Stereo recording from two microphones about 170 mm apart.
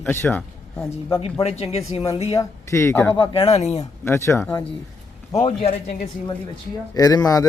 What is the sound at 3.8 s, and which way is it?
A man's voice, 15° left (ahead or behind).